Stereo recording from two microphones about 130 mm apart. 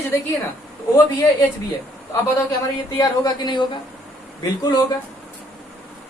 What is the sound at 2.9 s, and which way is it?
Speech, 30° left (ahead or behind).